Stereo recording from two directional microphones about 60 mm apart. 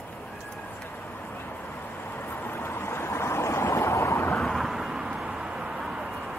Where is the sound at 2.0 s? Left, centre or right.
Left.